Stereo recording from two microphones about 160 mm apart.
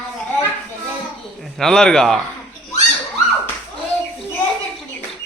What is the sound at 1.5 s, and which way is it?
Speech, 5° left (ahead or behind).